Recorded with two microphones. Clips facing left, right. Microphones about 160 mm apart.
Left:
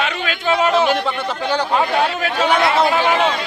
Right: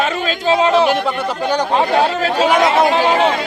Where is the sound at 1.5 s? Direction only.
15° right (ahead or behind).